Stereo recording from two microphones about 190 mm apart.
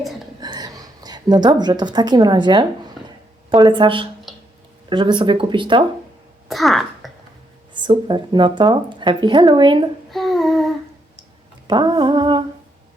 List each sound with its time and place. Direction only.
0.4 s a woman's voice: 20° right (ahead or behind)
6.5 s speech: centre (ahead or behind)
7.7 s speech: 25° right (ahead or behind)
10.1 s a sound: centre (ahead or behind)
11.7 s humming: 20° right (ahead or behind)